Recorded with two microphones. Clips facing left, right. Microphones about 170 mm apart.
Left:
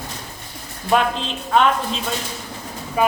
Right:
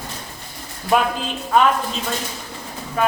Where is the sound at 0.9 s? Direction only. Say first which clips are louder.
Even; 5° right (ahead or behind).